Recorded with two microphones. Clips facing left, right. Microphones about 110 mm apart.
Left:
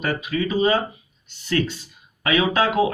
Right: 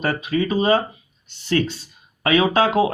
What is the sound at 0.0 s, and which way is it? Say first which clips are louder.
Speech: right 2 dB; 35° right (ahead or behind).